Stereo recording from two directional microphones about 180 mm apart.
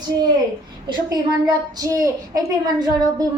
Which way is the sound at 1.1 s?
20° right (ahead or behind).